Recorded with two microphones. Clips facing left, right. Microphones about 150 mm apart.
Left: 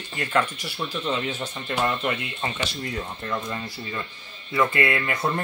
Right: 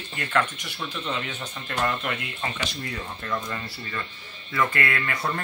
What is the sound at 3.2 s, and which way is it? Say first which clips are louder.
Speech: right 1 dB; 20° left (ahead or behind).